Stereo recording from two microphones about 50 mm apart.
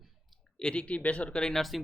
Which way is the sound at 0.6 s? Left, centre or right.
Left.